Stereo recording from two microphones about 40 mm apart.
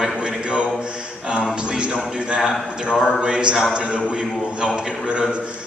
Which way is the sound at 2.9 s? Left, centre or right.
Centre.